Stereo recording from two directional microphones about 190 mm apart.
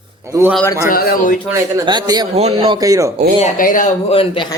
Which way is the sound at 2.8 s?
15° right (ahead or behind).